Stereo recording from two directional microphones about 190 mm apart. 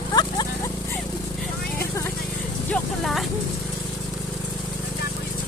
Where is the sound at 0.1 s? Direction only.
20° left (ahead or behind).